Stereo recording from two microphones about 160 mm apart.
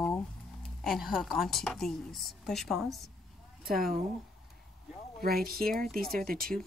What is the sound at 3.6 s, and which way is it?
Speech, 65° right (ahead or behind).